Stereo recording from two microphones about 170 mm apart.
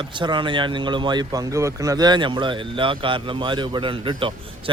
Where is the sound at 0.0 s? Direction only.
30° right (ahead or behind).